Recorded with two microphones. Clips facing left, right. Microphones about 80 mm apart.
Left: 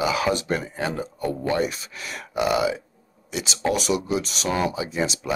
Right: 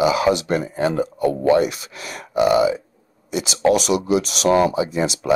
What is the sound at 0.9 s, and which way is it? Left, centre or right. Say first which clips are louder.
Speech: right 7 dB; right.